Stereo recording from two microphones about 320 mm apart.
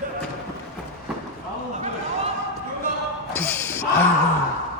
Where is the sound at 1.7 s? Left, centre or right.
Right.